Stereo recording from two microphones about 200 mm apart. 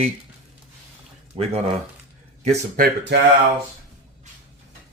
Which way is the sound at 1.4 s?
30° right (ahead or behind).